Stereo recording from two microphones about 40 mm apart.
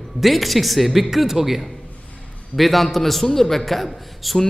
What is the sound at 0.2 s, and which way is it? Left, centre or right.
A man's voice, centre.